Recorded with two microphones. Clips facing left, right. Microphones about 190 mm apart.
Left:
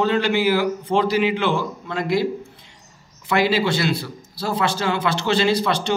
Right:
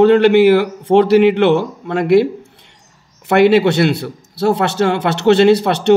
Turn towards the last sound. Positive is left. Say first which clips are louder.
# right 9 dB
turn(degrees=-65)  # may be behind; listen again after turning